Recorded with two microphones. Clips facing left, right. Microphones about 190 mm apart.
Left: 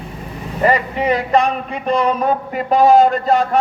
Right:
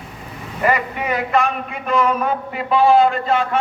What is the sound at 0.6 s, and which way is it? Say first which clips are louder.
A man's voice: left 3 dB; 30° left (ahead or behind).